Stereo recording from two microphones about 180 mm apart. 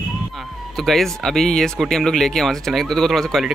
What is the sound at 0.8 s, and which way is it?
Speech, centre (ahead or behind).